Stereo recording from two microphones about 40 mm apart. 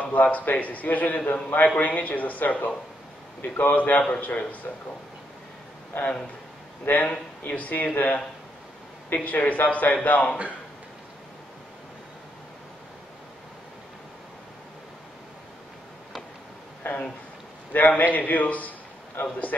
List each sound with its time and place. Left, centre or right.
0.0 s a man's voice: left
5.9 s a man's voice: left
7.1 s a man's voice: left
16.8 s a sound: left
17.7 s a man's voice: left
19.2 s a man's voice: left